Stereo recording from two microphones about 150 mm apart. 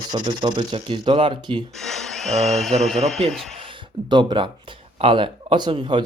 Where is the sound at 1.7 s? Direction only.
5° left (ahead or behind).